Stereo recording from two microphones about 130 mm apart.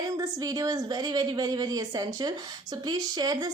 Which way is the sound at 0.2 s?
30° right (ahead or behind).